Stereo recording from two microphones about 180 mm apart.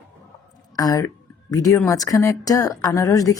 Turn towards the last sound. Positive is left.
turn(degrees=20)  # may be behind; listen again after turning